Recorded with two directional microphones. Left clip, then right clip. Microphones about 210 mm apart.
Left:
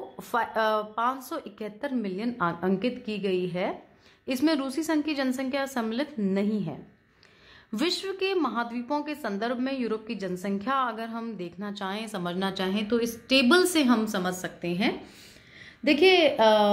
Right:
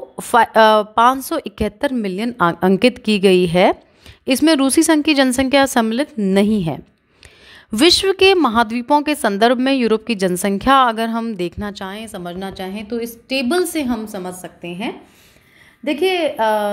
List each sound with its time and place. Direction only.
0.2 s a woman's voice: 40° right (ahead or behind)
6.3 s a woman's voice: 45° right (ahead or behind); by 16.7 s 20° right (ahead or behind)